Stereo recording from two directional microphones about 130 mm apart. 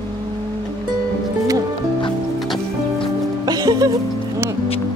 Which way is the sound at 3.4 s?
30° right (ahead or behind).